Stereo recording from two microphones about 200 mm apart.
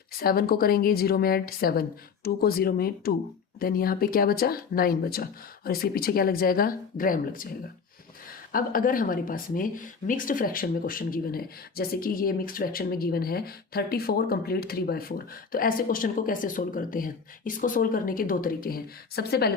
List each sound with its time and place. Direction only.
0.2 s speech: 50° left (ahead or behind)